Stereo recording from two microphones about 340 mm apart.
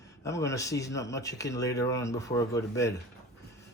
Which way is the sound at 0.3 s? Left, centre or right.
Centre.